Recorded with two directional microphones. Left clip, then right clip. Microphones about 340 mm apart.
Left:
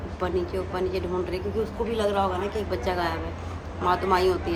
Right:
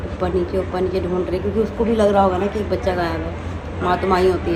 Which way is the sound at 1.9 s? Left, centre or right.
Centre.